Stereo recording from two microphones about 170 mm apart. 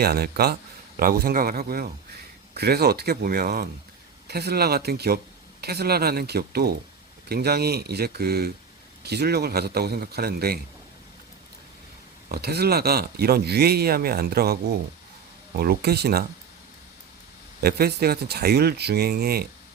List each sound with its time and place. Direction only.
0.0 s a man's voice: 70° right (ahead or behind)
12.3 s a man's voice: 70° right (ahead or behind)
17.6 s a man's voice: 65° right (ahead or behind)